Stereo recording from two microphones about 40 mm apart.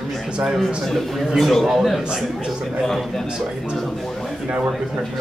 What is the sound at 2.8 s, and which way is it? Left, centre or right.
A man's voice, centre.